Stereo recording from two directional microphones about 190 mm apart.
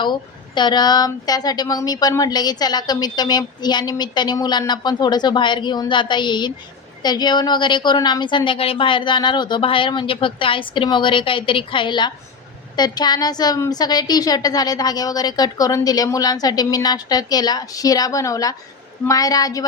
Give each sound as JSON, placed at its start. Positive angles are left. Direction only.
{"t": 0.0, "sound": "speech", "side_deg": 25}